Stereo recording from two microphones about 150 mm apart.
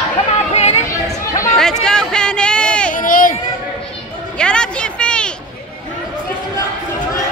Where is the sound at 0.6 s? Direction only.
45° left (ahead or behind).